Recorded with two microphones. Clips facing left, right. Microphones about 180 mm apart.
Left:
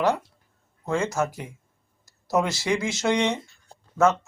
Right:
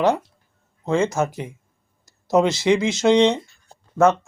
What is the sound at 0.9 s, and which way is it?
Speech, 20° right (ahead or behind).